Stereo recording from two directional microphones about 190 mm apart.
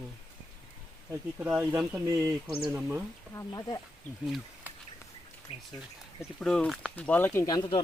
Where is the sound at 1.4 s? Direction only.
10° right (ahead or behind).